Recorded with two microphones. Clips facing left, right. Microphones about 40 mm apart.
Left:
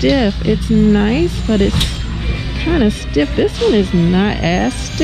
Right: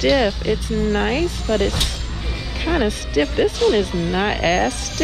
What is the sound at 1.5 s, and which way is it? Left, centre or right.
Speech, centre.